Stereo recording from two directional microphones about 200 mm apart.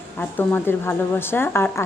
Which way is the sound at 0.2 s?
10° left (ahead or behind).